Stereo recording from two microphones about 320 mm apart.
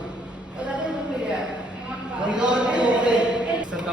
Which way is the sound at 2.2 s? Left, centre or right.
Centre.